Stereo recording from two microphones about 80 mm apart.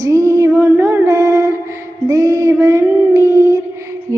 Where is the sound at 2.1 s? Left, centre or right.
Right.